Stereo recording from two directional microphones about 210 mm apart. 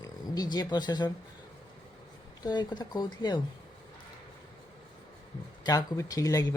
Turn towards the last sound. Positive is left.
turn(degrees=15)  # may be behind; listen again after turning